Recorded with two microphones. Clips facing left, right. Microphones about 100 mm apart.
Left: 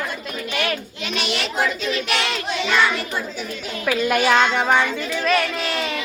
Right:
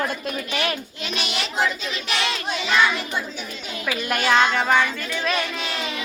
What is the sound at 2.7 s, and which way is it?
Speech, 5° right (ahead or behind).